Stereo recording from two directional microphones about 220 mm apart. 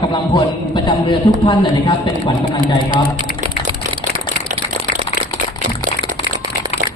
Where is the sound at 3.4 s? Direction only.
20° right (ahead or behind).